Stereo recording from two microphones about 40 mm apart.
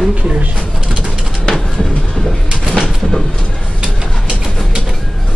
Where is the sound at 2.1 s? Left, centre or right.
Centre.